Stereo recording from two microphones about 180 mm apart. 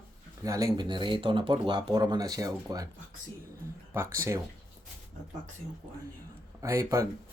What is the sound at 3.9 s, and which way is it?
Speech, 15° right (ahead or behind).